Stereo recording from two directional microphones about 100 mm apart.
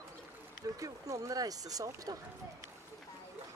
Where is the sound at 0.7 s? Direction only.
35° right (ahead or behind).